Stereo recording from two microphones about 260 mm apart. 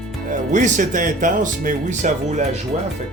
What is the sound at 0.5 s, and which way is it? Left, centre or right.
Speech, right.